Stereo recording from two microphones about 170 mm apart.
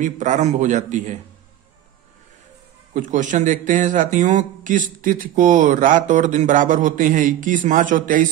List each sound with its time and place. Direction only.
0.0 s speech: 45° right (ahead or behind)
2.9 s speech: 45° right (ahead or behind)